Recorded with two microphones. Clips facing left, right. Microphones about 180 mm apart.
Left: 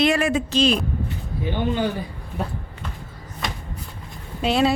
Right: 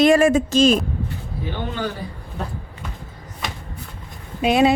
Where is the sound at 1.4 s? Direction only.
20° left (ahead or behind).